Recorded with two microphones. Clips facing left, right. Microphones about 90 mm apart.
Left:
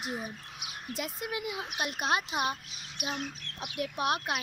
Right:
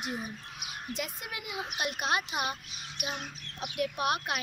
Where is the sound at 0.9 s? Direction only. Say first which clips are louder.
Left 3 dB; 35° left (ahead or behind).